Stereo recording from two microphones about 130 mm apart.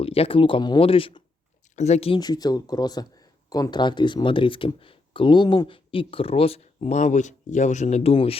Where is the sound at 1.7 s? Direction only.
60° left (ahead or behind).